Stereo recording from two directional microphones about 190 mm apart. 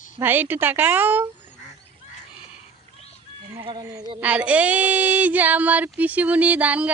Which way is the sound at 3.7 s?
20° right (ahead or behind).